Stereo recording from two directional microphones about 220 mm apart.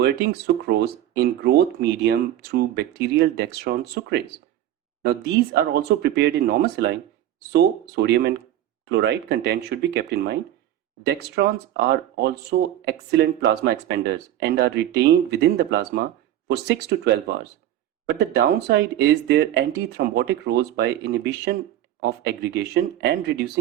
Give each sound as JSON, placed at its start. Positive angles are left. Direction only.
{"t": 0.0, "sound": "speech", "side_deg": -50}